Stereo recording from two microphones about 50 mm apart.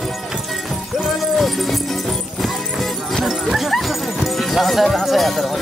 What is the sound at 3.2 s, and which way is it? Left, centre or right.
Dog, centre.